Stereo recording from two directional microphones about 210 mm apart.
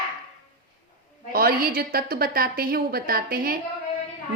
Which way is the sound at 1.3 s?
45° right (ahead or behind).